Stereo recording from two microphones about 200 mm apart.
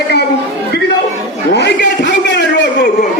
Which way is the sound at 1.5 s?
50° left (ahead or behind).